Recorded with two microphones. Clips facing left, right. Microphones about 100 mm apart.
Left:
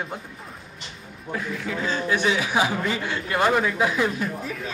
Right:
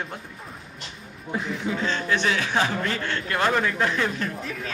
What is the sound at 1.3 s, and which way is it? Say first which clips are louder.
Speech: right 1 dB; 20° right (ahead or behind).